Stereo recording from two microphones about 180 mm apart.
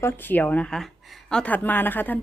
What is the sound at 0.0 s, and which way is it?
A woman's voice, 10° left (ahead or behind).